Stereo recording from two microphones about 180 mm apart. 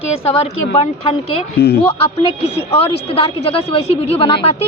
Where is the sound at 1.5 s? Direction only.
65° left (ahead or behind).